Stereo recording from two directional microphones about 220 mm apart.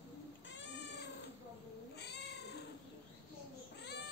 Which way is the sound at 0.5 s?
55° left (ahead or behind).